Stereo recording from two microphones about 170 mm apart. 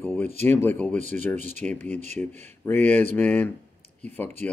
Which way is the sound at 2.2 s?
10° left (ahead or behind).